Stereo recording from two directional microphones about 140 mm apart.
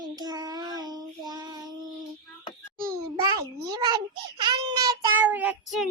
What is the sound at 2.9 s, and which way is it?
A child's voice, 25° right (ahead or behind).